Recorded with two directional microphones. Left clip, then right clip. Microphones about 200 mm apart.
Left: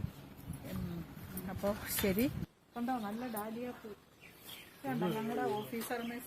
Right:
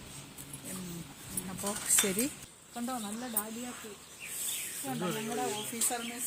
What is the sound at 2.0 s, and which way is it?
Speech, 20° left (ahead or behind).